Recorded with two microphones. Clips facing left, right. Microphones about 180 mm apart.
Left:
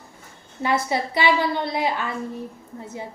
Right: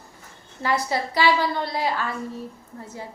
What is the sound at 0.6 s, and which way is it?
A woman's voice, 20° left (ahead or behind).